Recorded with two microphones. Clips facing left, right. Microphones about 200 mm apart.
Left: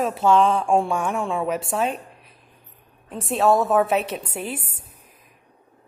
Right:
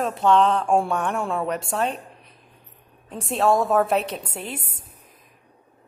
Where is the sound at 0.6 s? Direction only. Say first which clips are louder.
Left 1 dB; 5° right (ahead or behind).